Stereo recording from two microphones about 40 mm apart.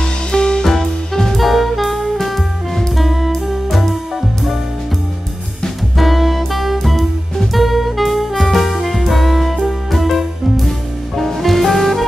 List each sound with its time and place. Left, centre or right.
0.0 s music: left
0.7 s music: centre
5.9 s music: centre